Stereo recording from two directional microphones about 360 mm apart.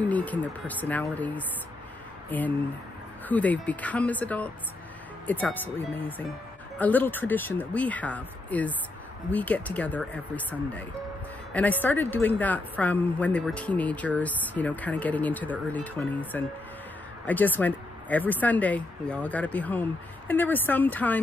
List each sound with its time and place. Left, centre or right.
0.0 s speech: centre